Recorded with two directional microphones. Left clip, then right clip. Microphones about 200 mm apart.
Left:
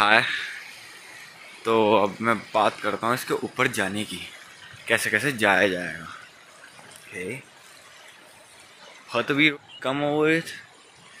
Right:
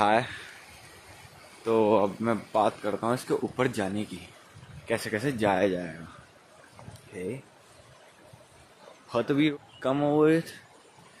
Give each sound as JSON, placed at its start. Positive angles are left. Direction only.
{"t": 0.0, "sound": "speech", "side_deg": -5}
{"t": 1.6, "sound": "speech", "side_deg": 0}
{"t": 3.3, "sound": "speech", "side_deg": 0}
{"t": 3.5, "sound": "speech", "side_deg": -15}
{"t": 7.2, "sound": "speech", "side_deg": -15}
{"t": 9.1, "sound": "speech", "side_deg": -15}
{"t": 9.8, "sound": "speech", "side_deg": -25}